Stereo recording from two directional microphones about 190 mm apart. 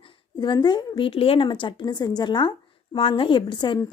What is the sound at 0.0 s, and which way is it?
A woman's voice, 25° left (ahead or behind).